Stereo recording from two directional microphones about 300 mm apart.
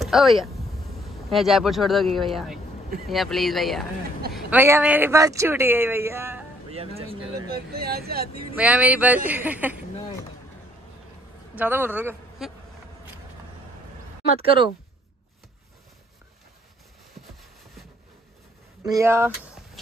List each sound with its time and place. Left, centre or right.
0.0 s speech: centre
6.7 s speech: centre
7.5 s speech: right
8.5 s speech: centre
11.5 s speech: centre
18.8 s speech: centre